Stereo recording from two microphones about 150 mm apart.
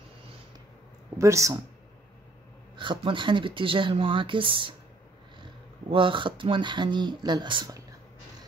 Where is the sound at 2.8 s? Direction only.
35° right (ahead or behind).